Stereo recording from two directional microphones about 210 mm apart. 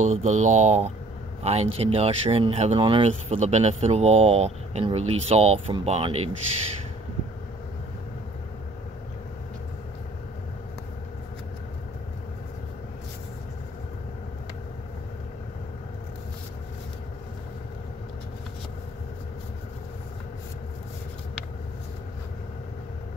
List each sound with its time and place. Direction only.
0.0 s speech: 35° right (ahead or behind)